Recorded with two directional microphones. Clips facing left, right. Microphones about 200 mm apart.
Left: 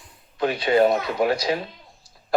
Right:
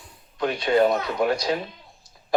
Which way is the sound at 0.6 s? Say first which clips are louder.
Left 1 dB; 20° left (ahead or behind).